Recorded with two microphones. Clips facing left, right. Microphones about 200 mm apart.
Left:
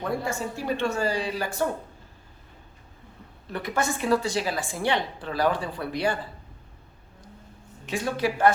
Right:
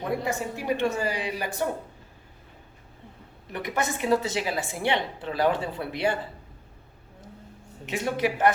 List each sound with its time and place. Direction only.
0.1 s a woman's voice: 20° right (ahead or behind)
3.5 s a woman's voice: 20° right (ahead or behind)
7.9 s a woman's voice: 20° right (ahead or behind)